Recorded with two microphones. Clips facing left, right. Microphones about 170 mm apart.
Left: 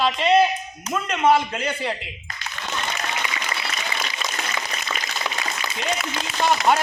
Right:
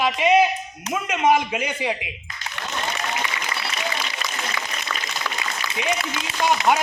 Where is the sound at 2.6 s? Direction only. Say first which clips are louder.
Even; 70° right (ahead or behind).